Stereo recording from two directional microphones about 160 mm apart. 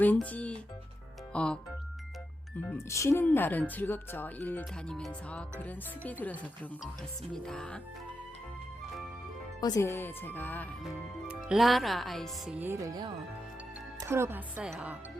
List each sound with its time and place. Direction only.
0.0 s speech: 10° left (ahead or behind)
2.9 s speech: 20° left (ahead or behind)
7.3 s speech: 5° left (ahead or behind)
9.6 s speech: 25° left (ahead or behind)
10.8 s speech: 5° right (ahead or behind)
12.5 s music: 15° right (ahead or behind)
14.1 s a woman's voice: 15° right (ahead or behind)